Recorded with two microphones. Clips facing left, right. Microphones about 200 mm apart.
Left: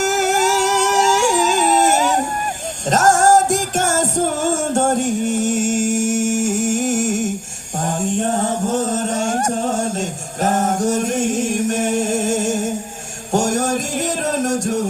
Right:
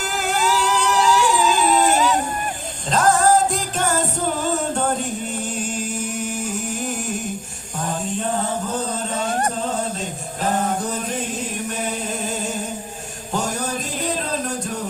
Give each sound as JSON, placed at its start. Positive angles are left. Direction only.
{"t": 0.0, "sound": "music", "side_deg": 45}
{"t": 7.8, "sound": "a sound", "side_deg": 45}
{"t": 9.6, "sound": "music", "side_deg": 45}